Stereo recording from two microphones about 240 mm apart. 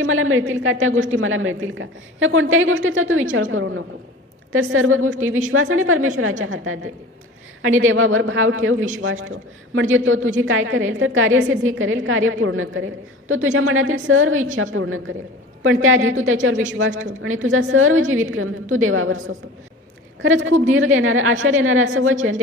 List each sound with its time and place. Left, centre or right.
0.0 s a woman's voice: right
4.5 s a woman's voice: right